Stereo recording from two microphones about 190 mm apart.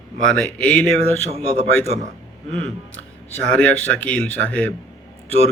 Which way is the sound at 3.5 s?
5° left (ahead or behind).